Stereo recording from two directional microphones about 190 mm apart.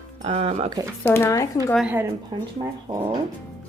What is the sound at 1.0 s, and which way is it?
Speech, 15° left (ahead or behind).